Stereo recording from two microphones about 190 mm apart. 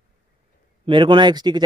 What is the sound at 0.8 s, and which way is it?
Speech, 25° right (ahead or behind).